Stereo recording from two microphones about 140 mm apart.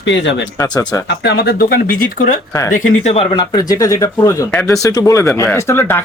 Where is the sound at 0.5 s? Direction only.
30° left (ahead or behind).